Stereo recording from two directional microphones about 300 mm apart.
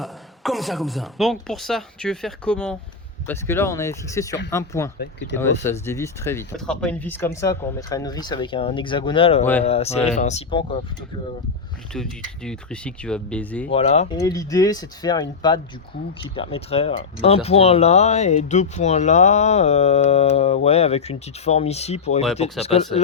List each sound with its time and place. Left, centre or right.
0.0 s speech: centre
4.9 s speech: left
5.6 s speech: centre
11.9 s speech: centre
13.7 s speech: centre